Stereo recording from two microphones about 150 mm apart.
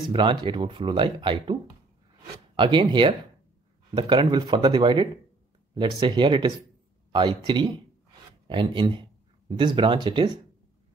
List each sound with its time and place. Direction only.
0.1 s speech: 30° right (ahead or behind)